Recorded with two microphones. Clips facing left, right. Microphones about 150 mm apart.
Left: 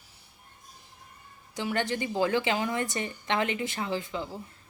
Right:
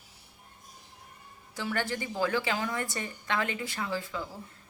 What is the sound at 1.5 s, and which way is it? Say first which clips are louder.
A woman's voice: left 3 dB; 20° left (ahead or behind).